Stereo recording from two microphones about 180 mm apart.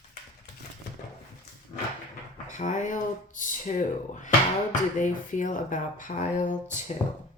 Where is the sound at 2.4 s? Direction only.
45° left (ahead or behind).